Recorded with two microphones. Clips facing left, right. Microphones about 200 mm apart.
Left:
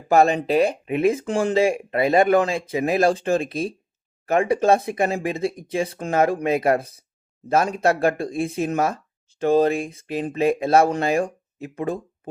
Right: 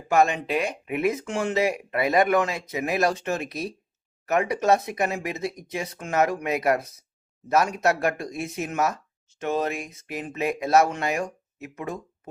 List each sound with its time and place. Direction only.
0.1 s speech: 35° left (ahead or behind)